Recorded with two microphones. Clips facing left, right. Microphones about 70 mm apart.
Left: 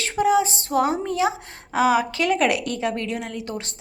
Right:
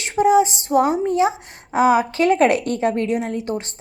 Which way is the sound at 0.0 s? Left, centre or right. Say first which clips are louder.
Right 4 dB; right.